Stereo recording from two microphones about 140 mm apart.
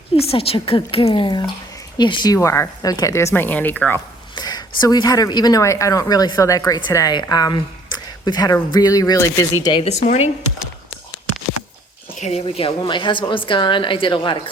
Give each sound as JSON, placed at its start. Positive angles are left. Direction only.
{"t": 0.2, "sound": "a woman's voice", "side_deg": 45}
{"t": 3.3, "sound": "speech", "side_deg": 15}
{"t": 4.4, "sound": "speech", "side_deg": 30}
{"t": 9.8, "sound": "speech", "side_deg": 50}
{"t": 12.2, "sound": "speech", "side_deg": 45}
{"t": 12.8, "sound": "a woman's voice", "side_deg": 35}